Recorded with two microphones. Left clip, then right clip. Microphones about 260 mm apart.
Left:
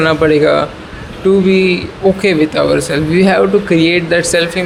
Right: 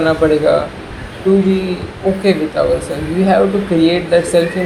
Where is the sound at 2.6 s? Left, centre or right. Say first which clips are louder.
Left 3 dB; left.